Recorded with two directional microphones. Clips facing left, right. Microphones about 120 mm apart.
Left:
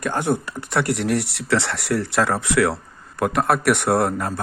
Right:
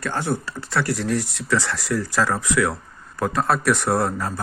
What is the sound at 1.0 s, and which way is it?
Speech, 70° left (ahead or behind).